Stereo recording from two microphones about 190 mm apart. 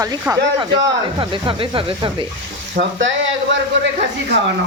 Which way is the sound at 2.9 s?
80° right.